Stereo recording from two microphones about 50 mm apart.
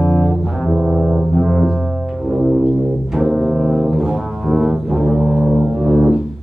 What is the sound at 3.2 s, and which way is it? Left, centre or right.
Brass instrument, centre.